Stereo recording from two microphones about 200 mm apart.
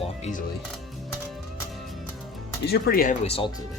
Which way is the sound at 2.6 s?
50° left (ahead or behind).